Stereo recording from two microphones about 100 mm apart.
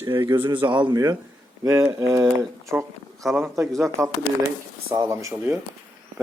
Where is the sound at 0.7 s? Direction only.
50° right (ahead or behind).